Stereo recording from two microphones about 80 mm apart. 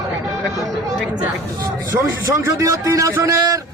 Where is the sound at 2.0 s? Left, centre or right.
Right.